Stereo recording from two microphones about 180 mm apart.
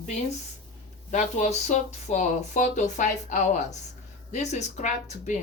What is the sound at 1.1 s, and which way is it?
Speech, 40° left (ahead or behind).